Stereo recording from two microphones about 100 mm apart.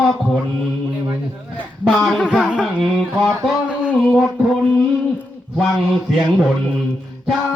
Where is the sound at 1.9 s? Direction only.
5° left (ahead or behind).